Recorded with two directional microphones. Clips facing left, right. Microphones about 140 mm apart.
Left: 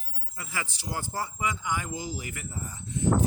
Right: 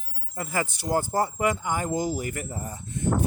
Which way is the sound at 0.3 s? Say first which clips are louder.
Right 8 dB; 50° right (ahead or behind).